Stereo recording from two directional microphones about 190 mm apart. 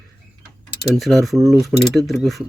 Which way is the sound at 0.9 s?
Centre (ahead or behind).